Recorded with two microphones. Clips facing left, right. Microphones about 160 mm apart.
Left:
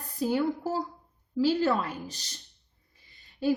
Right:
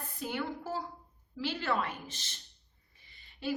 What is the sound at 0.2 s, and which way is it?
A woman's voice, 40° left (ahead or behind).